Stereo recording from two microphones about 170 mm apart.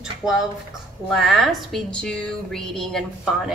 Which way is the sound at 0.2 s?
5° right (ahead or behind).